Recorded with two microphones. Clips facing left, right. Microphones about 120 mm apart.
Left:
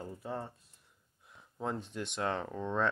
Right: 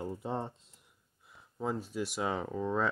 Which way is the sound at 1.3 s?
Centre (ahead or behind).